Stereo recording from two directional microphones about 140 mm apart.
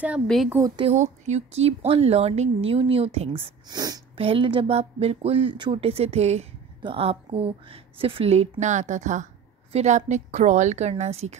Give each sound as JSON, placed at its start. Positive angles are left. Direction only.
{"t": 0.5, "sound": "speech", "side_deg": -20}
{"t": 0.9, "sound": "a woman's voice", "side_deg": -55}
{"t": 3.6, "sound": "speech", "side_deg": -30}
{"t": 4.2, "sound": "a woman's voice", "side_deg": -40}